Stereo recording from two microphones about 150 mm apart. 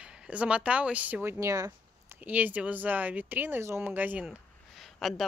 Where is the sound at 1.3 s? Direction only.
20° right (ahead or behind).